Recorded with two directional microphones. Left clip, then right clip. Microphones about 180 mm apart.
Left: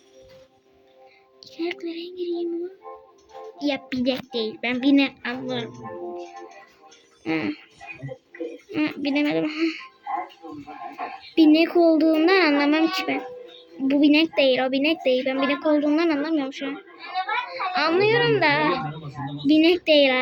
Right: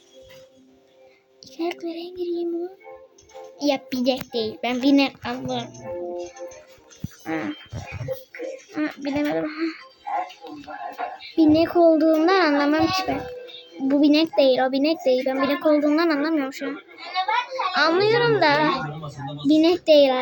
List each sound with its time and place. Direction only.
1.5 s a woman's voice: 5° right (ahead or behind)
3.6 s a woman's voice: centre (ahead or behind)
7.3 s a child's voice: 25° left (ahead or behind)
8.7 s a child's voice: 25° left (ahead or behind)
11.3 s a woman's voice: centre (ahead or behind)